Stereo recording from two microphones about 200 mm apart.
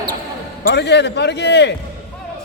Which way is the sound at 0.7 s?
60° left (ahead or behind).